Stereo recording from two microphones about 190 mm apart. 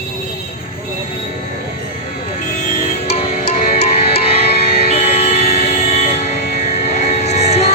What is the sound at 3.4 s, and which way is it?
Music, 50° left (ahead or behind).